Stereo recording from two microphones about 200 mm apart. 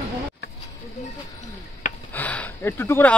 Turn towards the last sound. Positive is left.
turn(degrees=10)  # may be behind; listen again after turning